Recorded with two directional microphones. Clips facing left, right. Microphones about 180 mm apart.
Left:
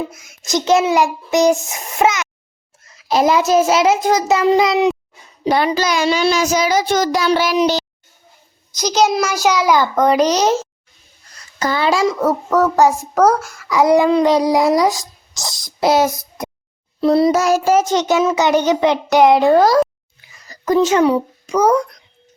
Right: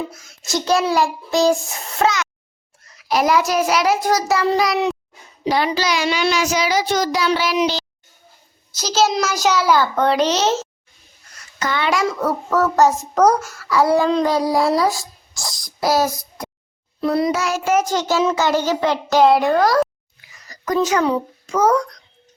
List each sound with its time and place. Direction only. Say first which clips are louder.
0.1 s child singing: left 4 dB; 20° left (ahead or behind)
5.5 s child singing: left 3 dB; 50° left (ahead or behind)
8.7 s a child's voice: left 3 dB; 15° left (ahead or behind)
11.6 s a child's voice: left 4 dB; 35° left (ahead or behind)
12.0 s a child's voice: left 4 dB; 15° left (ahead or behind)
17.0 s child singing: left 6 dB; 30° left (ahead or behind)
21.0 s a child's voice: left 5 dB; 15° left (ahead or behind)